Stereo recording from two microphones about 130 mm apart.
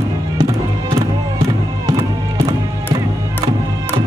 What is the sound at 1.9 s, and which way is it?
Music, 25° right (ahead or behind).